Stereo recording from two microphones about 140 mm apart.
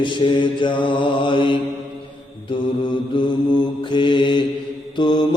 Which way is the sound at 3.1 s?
35° left (ahead or behind).